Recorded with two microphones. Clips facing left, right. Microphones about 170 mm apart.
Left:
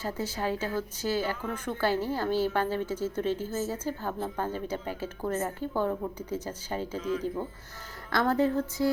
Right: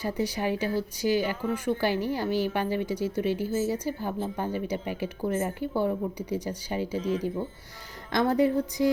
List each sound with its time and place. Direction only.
0.0 s a woman's voice: 15° right (ahead or behind)
7.0 s speech: 35° right (ahead or behind)
8.1 s a woman's voice: 15° right (ahead or behind)